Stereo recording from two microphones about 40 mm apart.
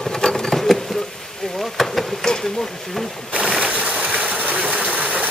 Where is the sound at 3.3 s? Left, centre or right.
Right.